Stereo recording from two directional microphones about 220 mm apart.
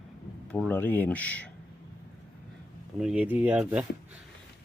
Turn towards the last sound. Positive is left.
turn(degrees=-5)  # may be behind; listen again after turning